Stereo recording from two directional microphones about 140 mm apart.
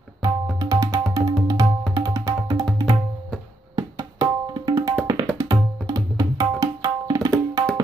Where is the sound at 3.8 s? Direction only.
25° right (ahead or behind).